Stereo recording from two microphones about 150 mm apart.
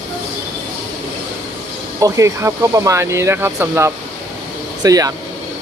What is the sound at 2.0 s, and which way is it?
Speech, 20° right (ahead or behind).